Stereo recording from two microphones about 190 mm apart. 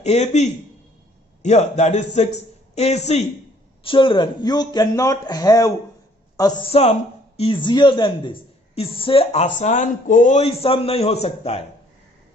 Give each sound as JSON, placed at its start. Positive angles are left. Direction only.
{"t": 0.0, "sound": "a woman's voice", "side_deg": 35}
{"t": 6.7, "sound": "a woman's voice", "side_deg": 35}